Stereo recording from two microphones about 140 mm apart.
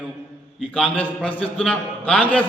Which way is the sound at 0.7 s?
10° left (ahead or behind).